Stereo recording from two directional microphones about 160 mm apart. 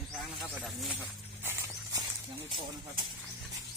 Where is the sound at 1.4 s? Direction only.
15° right (ahead or behind).